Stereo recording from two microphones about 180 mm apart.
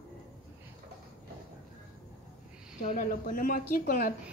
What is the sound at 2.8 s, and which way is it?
Speech, 50° left (ahead or behind).